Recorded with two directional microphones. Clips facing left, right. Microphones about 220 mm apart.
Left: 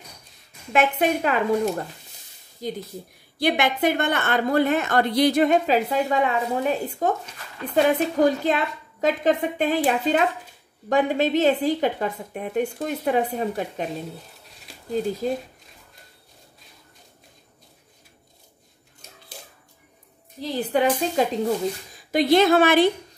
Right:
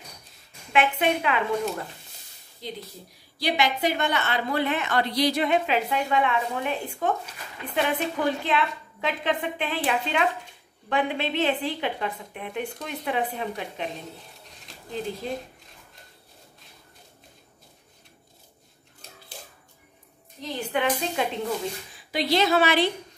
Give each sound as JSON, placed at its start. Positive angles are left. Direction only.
{"t": 0.7, "sound": "a woman's voice", "side_deg": 40}
{"t": 2.6, "sound": "a woman's voice", "side_deg": 45}
{"t": 3.3, "sound": "a woman's voice", "side_deg": 55}
{"t": 14.9, "sound": "a woman's voice", "side_deg": 45}
{"t": 20.3, "sound": "a woman's voice", "side_deg": 35}